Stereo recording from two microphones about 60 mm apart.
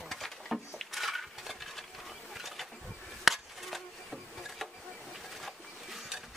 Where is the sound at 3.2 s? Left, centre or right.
Centre.